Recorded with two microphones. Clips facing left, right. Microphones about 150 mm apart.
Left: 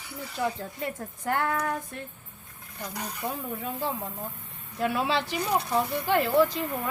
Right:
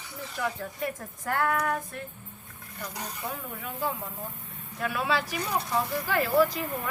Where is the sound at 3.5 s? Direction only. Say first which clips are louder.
Left 1 dB; 30° left (ahead or behind).